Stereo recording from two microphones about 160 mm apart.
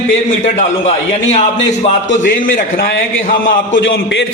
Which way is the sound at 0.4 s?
45° left (ahead or behind).